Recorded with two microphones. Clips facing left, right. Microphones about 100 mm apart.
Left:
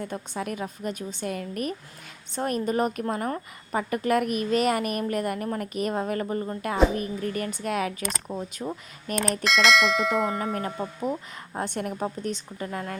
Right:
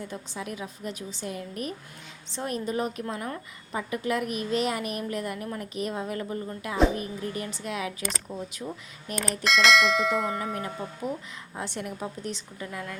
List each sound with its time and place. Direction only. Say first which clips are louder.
0.0 s a woman's voice: left 4 dB; 55° left (ahead or behind)
9.1 s speech: left 2 dB; centre (ahead or behind)
10.8 s a woman's voice: left 4 dB; 40° left (ahead or behind)